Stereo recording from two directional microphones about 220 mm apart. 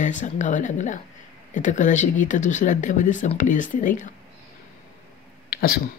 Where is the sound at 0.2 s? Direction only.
35° left (ahead or behind).